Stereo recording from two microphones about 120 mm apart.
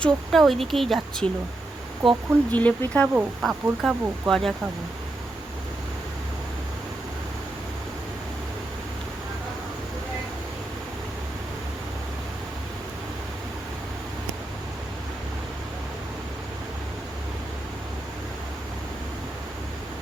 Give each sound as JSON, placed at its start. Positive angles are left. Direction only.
{"t": 0.0, "sound": "speech", "side_deg": 0}
{"t": 2.5, "sound": "speech", "side_deg": 10}